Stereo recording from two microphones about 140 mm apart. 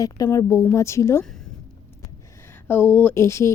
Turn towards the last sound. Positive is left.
turn(degrees=20)  # may be behind; listen again after turning